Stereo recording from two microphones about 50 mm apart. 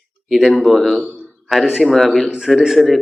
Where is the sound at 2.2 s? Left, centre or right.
Centre.